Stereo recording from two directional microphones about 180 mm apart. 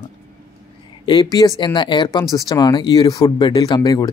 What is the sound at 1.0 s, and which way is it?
Speech, 25° left (ahead or behind).